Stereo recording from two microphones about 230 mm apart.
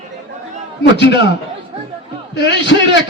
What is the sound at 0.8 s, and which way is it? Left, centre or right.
Music, left.